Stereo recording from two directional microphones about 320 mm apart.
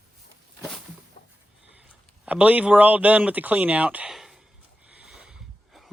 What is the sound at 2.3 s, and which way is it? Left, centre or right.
Speech, centre.